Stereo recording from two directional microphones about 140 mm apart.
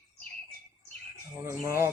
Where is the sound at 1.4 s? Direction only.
20° right (ahead or behind).